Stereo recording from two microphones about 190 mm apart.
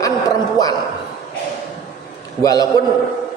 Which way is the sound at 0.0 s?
20° left (ahead or behind).